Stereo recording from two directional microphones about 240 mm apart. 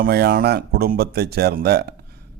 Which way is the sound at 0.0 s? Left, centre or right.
Right.